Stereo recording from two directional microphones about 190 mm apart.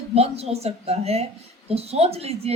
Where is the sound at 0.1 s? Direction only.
30° right (ahead or behind).